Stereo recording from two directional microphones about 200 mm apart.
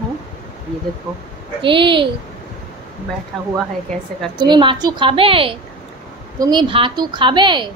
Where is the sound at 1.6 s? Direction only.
25° right (ahead or behind).